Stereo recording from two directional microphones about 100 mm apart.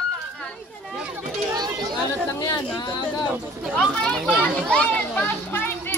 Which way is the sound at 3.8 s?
5° left (ahead or behind).